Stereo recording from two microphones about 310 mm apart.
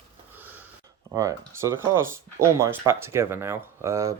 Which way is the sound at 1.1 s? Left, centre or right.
Centre.